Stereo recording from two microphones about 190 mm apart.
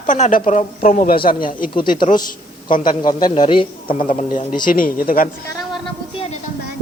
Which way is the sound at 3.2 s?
25° left (ahead or behind).